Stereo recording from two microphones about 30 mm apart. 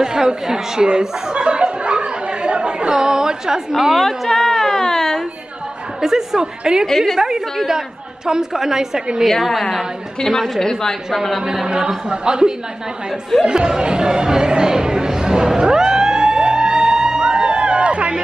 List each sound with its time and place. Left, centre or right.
0.0 s chuckle: right
2.9 s a woman's voice: right
3.9 s a woman's voice: centre
4.8 s a sound: centre
5.9 s speech: centre
7.2 s a woman's voice: centre
9.4 s a woman's voice: centre
10.6 s a woman's voice: centre
11.6 s speech: right
14.6 s a sound: right